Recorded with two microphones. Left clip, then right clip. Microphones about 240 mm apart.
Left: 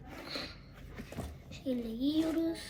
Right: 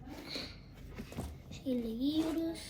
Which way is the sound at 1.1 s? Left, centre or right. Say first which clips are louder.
Left 2 dB; centre.